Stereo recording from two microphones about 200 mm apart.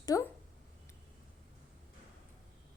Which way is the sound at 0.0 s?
15° left (ahead or behind).